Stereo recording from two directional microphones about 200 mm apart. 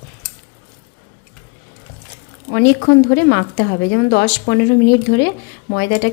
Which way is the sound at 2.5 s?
65° left (ahead or behind).